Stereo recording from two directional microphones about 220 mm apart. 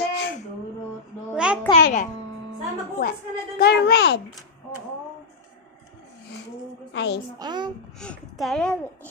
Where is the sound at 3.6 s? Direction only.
45° left (ahead or behind).